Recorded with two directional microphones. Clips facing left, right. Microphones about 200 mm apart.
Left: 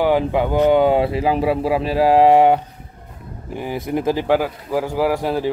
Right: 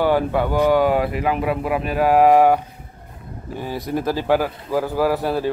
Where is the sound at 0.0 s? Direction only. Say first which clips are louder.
Left 1 dB; 15° left (ahead or behind).